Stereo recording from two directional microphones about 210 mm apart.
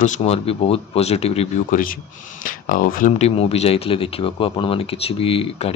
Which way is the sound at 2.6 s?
40° left (ahead or behind).